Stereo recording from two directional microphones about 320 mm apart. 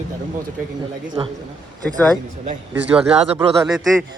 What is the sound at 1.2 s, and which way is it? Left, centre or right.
Speech, centre.